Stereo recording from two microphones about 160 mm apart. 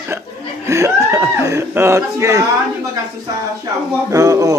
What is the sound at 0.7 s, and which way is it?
Speech, 15° right (ahead or behind).